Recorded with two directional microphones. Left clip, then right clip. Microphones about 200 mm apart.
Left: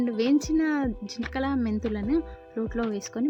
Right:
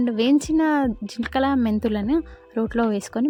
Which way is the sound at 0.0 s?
35° right (ahead or behind).